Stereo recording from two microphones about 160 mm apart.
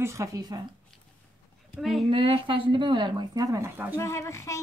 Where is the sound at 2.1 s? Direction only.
35° right (ahead or behind); by 4.0 s 15° right (ahead or behind).